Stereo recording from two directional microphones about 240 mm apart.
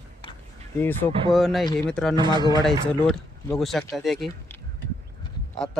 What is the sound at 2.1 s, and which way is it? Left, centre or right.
Speech, centre.